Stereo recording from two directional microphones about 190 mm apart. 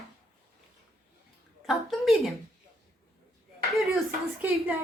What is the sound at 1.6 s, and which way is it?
Speech, centre (ahead or behind).